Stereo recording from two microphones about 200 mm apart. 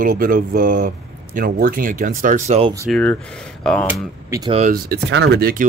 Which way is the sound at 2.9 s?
5° left (ahead or behind).